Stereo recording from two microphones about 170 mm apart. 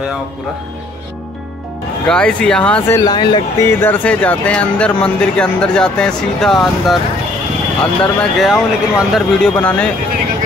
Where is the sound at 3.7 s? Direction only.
10° left (ahead or behind).